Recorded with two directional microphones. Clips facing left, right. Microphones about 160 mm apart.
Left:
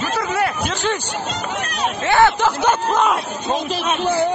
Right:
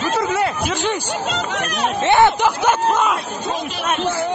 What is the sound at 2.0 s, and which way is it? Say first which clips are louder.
Speech: right 1 dB; 20° right (ahead or behind).